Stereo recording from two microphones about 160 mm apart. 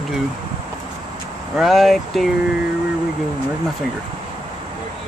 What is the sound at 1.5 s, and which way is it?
Speech, centre (ahead or behind).